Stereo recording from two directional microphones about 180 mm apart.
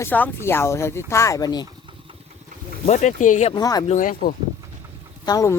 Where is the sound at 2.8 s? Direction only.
40° left (ahead or behind).